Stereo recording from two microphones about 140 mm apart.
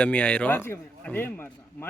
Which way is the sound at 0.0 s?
10° left (ahead or behind).